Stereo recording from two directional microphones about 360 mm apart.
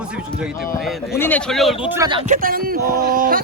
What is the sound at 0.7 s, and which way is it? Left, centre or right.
Speech, centre.